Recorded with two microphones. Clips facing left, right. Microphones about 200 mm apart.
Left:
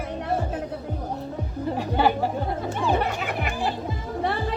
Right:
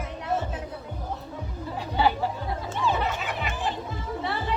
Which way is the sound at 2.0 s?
50° left (ahead or behind).